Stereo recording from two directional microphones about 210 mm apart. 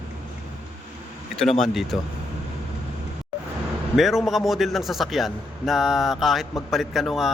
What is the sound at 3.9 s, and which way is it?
A man's voice, centre (ahead or behind).